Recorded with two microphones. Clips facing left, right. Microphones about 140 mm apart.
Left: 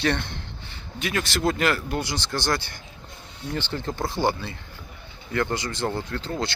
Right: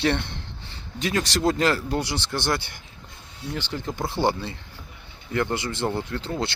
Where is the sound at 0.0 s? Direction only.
25° right (ahead or behind).